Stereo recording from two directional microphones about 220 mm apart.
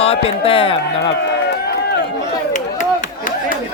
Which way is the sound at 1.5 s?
50° left (ahead or behind).